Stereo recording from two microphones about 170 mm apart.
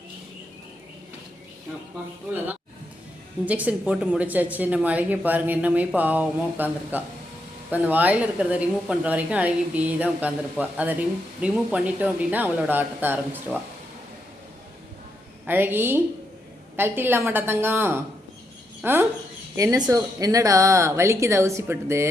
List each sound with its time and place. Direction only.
3.4 s a woman's voice: 10° right (ahead or behind)
15.4 s a woman's voice: 10° right (ahead or behind)